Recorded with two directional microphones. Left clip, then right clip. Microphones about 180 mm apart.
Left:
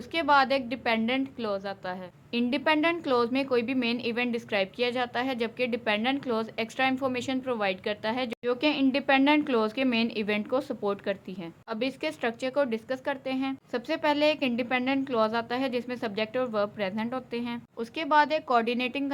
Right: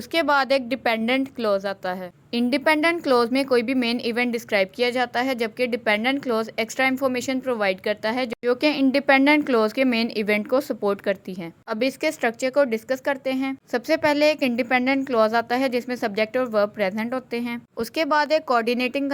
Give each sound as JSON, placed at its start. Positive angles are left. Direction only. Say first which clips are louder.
{"t": 0.1, "sound": "a woman's voice", "louder": "right 3 dB", "side_deg": -35}